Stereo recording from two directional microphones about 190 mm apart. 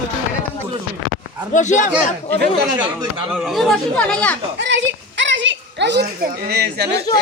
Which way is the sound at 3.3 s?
Centre (ahead or behind).